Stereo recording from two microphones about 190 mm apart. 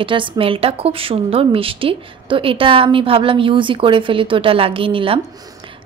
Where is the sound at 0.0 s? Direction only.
30° right (ahead or behind).